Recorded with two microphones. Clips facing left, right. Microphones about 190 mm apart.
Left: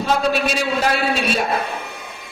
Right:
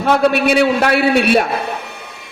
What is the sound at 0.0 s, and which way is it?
A man's voice, 60° right (ahead or behind).